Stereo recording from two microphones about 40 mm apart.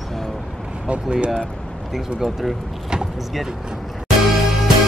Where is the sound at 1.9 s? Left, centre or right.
Centre.